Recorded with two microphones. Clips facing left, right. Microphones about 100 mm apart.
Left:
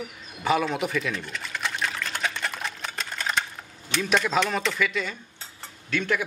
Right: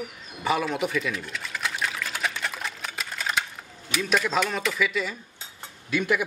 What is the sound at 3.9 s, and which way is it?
A man's voice, 5° right (ahead or behind).